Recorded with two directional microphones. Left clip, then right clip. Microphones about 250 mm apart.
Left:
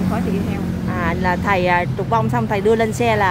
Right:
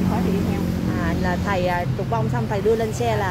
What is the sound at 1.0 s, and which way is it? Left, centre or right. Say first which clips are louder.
Speech: left 7 dB; centre.